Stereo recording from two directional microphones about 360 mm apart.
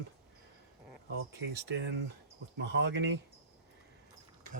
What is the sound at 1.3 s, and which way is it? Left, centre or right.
Speech, right.